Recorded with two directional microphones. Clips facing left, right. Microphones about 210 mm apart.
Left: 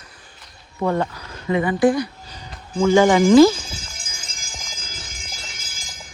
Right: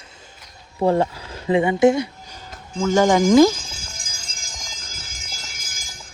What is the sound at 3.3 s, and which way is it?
Speech, 15° right (ahead or behind).